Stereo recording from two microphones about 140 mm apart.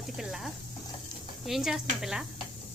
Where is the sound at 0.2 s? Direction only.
Centre (ahead or behind).